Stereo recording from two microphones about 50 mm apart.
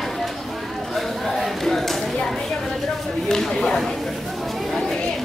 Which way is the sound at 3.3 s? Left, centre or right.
Centre.